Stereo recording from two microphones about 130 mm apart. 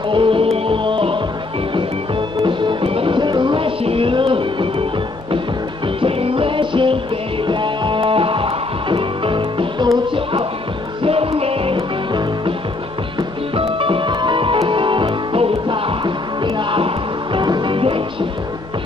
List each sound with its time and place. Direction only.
0.1 s music: 40° right (ahead or behind)
2.4 s music: 40° right (ahead or behind)
5.9 s music: 45° right (ahead or behind)
11.0 s music: 45° right (ahead or behind)
13.6 s music: 45° right (ahead or behind)